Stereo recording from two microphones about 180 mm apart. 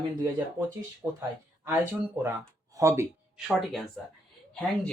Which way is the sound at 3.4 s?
Centre (ahead or behind).